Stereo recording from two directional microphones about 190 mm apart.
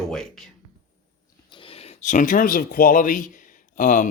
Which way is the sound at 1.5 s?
30° left (ahead or behind).